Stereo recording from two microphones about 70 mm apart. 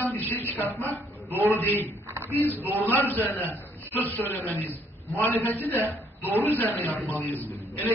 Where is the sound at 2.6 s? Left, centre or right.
Right.